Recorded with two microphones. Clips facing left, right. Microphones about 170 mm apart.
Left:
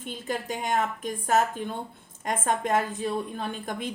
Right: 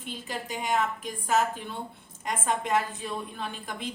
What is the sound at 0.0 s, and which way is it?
A woman's voice, 50° left (ahead or behind).